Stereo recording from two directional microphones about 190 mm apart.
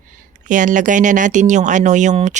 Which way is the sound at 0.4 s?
40° right (ahead or behind).